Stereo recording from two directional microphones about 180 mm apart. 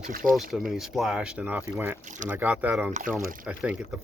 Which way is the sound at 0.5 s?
Centre (ahead or behind).